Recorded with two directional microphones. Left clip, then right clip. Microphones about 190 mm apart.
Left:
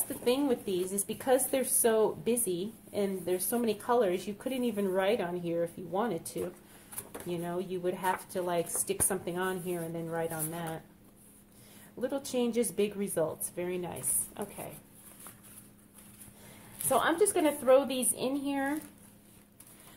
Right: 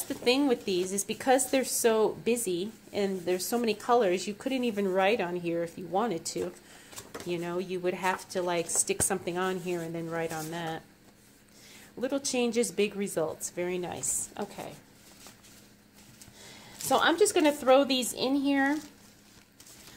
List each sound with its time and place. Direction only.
0.1 s a woman's voice: 35° right (ahead or behind)
12.0 s a woman's voice: 30° right (ahead or behind)
16.9 s a woman's voice: 35° right (ahead or behind)